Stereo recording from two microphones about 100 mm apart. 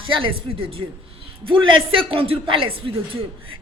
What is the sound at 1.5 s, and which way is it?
A woman's voice, 65° right (ahead or behind).